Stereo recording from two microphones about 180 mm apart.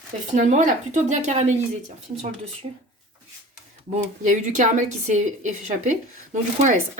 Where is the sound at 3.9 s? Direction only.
45° right (ahead or behind).